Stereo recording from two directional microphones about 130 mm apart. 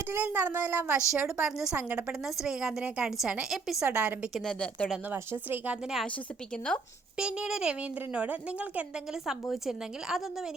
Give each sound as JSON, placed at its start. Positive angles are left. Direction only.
{"t": 0.1, "sound": "a woman's voice", "side_deg": -15}
{"t": 4.4, "sound": "a woman's voice", "side_deg": 5}
{"t": 5.1, "sound": "a woman's voice", "side_deg": -15}
{"t": 7.2, "sound": "a woman's voice", "side_deg": -5}